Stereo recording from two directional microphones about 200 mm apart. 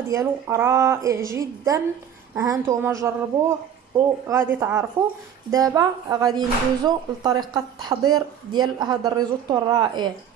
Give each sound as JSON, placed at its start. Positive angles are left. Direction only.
{"t": 0.1, "sound": "speech", "side_deg": -15}